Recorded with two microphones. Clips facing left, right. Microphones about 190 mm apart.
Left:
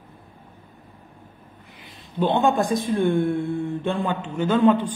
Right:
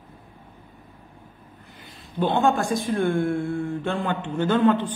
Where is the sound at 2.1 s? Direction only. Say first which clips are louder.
Left 1 dB; 20° left (ahead or behind).